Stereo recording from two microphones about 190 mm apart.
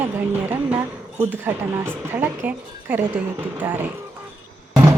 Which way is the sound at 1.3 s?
10° right (ahead or behind).